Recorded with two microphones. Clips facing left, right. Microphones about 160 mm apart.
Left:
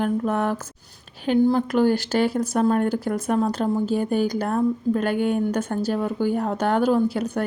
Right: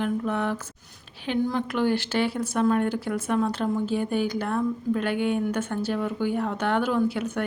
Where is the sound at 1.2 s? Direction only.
40° left (ahead or behind).